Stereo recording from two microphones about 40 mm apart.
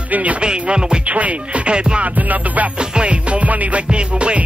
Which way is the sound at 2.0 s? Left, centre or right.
Right.